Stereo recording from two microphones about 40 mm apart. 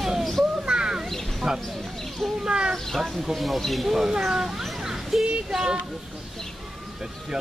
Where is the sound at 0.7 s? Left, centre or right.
Right.